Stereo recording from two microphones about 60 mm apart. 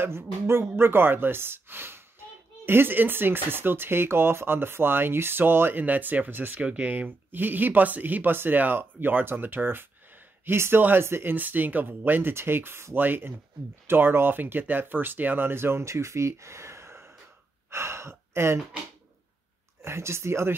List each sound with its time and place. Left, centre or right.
0.0 s a woman's voice: right
11.3 s a woman's voice: right
19.8 s speech: right